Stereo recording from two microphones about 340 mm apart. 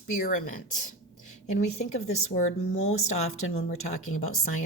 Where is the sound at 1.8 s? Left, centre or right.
Centre.